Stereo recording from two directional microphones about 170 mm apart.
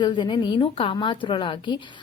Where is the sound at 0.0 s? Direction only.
25° left (ahead or behind).